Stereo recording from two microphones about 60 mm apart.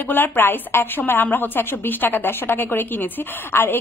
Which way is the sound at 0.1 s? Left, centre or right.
Left.